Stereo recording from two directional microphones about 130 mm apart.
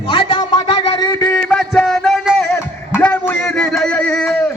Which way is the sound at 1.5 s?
5° left (ahead or behind).